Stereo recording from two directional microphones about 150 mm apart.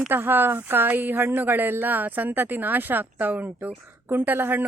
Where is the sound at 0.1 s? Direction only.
15° right (ahead or behind).